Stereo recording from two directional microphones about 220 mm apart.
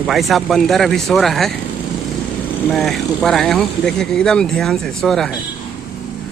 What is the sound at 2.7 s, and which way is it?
Speech, centre (ahead or behind).